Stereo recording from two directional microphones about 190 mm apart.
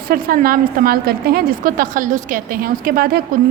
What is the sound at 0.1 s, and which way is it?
A woman's voice, 50° right (ahead or behind).